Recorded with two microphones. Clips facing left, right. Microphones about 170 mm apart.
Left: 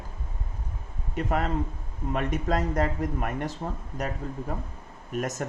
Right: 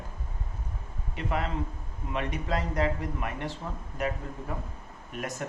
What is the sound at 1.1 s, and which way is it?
A man's voice, 45° left (ahead or behind).